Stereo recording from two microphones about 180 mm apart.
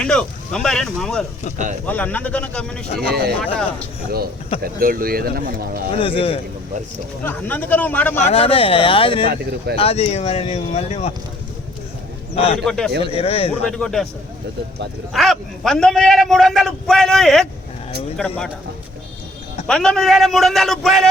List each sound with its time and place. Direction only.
0.0 s a man's voice: 5° left (ahead or behind)
3.0 s speech: 60° right (ahead or behind)
4.6 s speech: 50° right (ahead or behind)
5.9 s speech: 30° left (ahead or behind)
7.3 s a man's voice: 10° left (ahead or behind)
8.2 s speech: 35° left (ahead or behind)
12.3 s a man's voice: 35° left (ahead or behind)
12.6 s a man's voice: 5° left (ahead or behind)
13.0 s speech: 35° left (ahead or behind)
13.5 s a man's voice: centre (ahead or behind)
15.1 s a man's voice: centre (ahead or behind)
19.6 s a man's voice: 5° left (ahead or behind)